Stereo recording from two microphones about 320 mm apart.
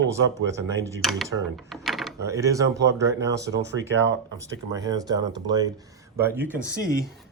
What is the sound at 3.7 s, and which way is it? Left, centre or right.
Speech, right.